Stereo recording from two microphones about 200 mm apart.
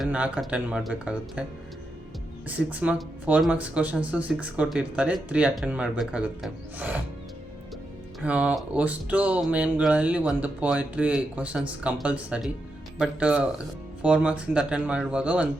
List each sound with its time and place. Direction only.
0.0 s speech: 5° right (ahead or behind)
2.5 s speech: 5° right (ahead or behind)
8.2 s speech: 5° right (ahead or behind)